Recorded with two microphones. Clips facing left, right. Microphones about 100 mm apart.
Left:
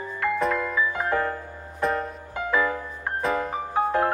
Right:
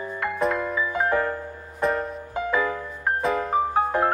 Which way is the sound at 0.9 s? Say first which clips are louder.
Right 2 dB; 20° right (ahead or behind).